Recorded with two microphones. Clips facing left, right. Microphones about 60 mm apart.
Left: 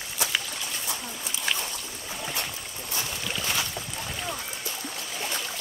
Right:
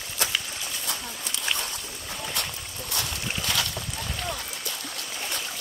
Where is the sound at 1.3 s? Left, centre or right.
Right.